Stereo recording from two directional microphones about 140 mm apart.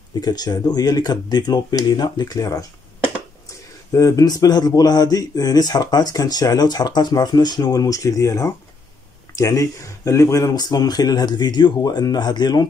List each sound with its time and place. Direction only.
0.2 s speech: 30° left (ahead or behind)